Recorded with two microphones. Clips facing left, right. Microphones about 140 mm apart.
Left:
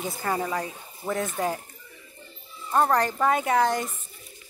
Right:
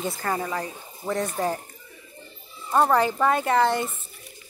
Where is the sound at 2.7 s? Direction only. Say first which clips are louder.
Right 2 dB; 5° right (ahead or behind).